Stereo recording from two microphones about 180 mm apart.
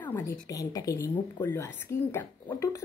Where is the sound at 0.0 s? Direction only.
15° left (ahead or behind).